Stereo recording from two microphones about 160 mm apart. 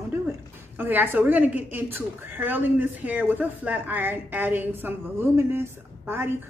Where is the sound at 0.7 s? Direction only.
10° right (ahead or behind).